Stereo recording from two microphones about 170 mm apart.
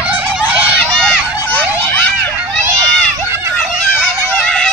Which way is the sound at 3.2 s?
15° right (ahead or behind).